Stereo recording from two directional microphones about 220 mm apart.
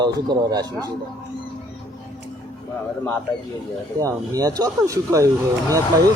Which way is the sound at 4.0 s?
15° right (ahead or behind).